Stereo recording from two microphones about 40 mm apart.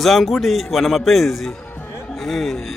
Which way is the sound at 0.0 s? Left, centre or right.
Centre.